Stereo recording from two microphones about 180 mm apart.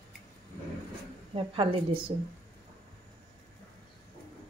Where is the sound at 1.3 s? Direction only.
30° right (ahead or behind).